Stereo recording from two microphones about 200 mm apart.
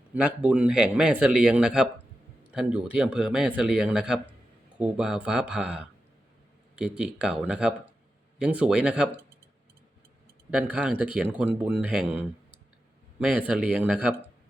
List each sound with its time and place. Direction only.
0.1 s speech: 5° right (ahead or behind)
10.5 s speech: 5° right (ahead or behind)